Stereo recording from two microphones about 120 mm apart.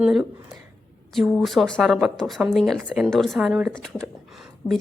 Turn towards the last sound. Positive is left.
turn(degrees=30)  # may be behind; listen again after turning